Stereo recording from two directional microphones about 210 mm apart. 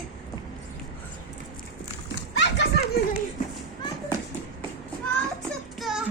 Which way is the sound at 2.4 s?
55° left (ahead or behind).